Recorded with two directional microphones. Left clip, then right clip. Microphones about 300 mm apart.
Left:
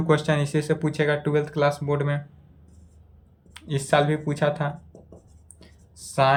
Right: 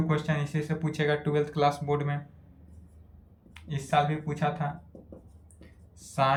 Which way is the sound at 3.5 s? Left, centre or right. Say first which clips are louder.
Left 5 dB; centre.